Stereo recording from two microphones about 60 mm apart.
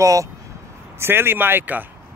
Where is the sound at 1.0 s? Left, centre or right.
Right.